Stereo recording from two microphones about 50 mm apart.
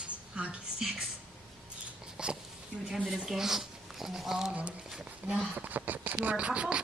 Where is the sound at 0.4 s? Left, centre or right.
Centre.